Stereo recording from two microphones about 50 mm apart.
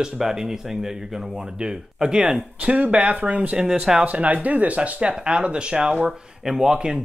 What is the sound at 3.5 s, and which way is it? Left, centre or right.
Speech, centre.